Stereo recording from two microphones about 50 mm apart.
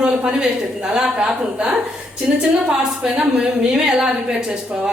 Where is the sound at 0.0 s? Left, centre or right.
Centre.